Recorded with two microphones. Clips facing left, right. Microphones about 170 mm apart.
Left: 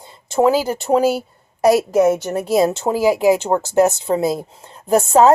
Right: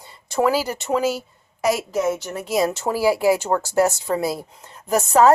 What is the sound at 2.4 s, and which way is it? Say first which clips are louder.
Speech: left 4 dB; 30° left (ahead or behind).